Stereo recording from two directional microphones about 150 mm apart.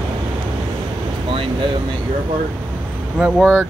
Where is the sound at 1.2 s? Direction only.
35° right (ahead or behind).